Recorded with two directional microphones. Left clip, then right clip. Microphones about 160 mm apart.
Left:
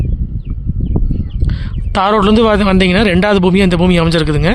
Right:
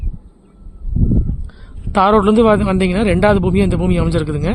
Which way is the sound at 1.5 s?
15° left (ahead or behind).